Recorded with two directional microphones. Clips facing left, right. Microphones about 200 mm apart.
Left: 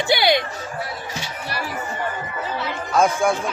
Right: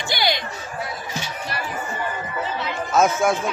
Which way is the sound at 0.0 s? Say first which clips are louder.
Left 6 dB; 60° left (ahead or behind).